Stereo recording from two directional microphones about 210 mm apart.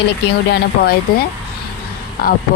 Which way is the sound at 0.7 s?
50° left (ahead or behind).